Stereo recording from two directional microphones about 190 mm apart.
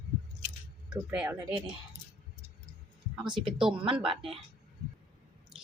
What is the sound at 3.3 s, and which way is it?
Speech, 25° right (ahead or behind).